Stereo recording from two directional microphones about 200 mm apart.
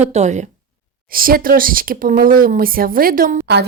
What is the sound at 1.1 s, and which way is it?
Speech, 45° right (ahead or behind).